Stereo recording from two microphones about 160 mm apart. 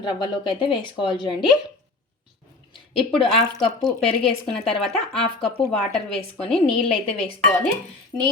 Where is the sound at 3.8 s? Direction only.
5° left (ahead or behind).